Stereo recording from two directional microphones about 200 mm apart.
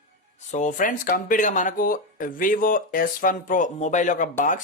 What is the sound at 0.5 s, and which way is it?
Speech, 40° left (ahead or behind).